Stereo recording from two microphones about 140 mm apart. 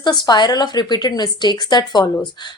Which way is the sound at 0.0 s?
30° left (ahead or behind).